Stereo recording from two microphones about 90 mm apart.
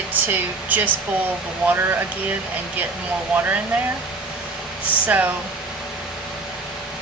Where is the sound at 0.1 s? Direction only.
20° right (ahead or behind).